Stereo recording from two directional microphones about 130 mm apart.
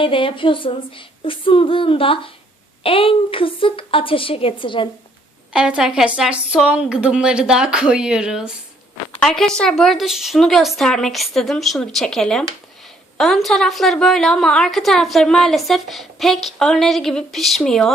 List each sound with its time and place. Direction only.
0.0 s speech: 45° left (ahead or behind)
5.5 s a woman's voice: 5° right (ahead or behind)
9.2 s a woman's voice: 5° left (ahead or behind)